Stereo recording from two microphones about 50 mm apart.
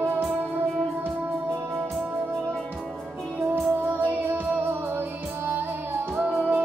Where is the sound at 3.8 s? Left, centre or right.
Right.